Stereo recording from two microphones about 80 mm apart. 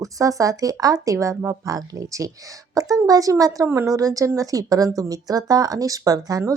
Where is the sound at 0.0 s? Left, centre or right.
Right.